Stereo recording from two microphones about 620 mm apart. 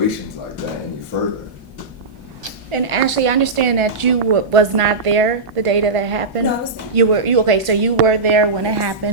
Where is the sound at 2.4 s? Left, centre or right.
Right.